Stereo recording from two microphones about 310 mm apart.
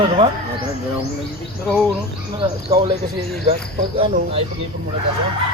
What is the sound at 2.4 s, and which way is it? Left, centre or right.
Cricket, centre.